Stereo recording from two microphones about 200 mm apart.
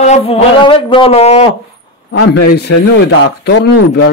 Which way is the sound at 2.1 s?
55° left (ahead or behind).